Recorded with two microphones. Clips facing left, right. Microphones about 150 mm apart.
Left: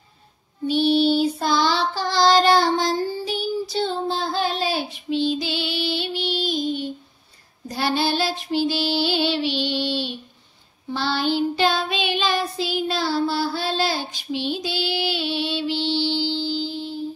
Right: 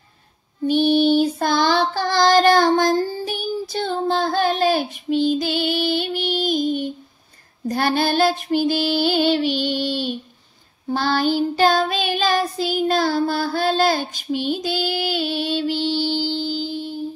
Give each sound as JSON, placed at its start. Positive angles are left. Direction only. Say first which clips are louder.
{"t": 0.7, "sound": "child singing", "louder": "right 2 dB", "side_deg": -50}
{"t": 7.6, "sound": "female singing", "louder": "right 3 dB", "side_deg": -50}
{"t": 10.9, "sound": "child singing", "louder": "right 3 dB", "side_deg": -45}